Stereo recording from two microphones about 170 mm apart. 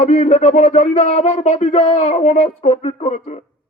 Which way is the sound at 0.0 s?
45° left (ahead or behind).